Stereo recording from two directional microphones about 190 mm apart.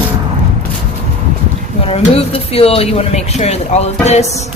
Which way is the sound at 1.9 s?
30° left (ahead or behind).